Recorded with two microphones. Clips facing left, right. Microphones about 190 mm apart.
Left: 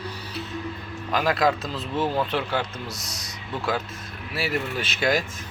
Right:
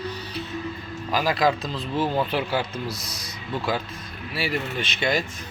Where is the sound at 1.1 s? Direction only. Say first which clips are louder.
Even; centre (ahead or behind).